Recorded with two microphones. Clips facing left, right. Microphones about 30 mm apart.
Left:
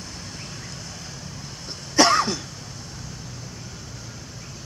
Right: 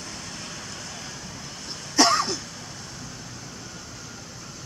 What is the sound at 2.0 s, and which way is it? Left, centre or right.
Cough, left.